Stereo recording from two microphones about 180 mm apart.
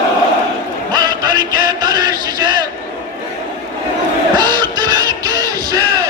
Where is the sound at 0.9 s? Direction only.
25° right (ahead or behind).